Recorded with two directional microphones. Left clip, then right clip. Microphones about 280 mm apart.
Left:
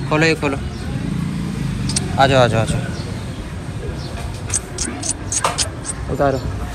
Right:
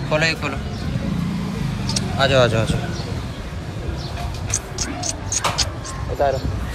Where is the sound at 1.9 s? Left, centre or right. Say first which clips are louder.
Left 4 dB; centre.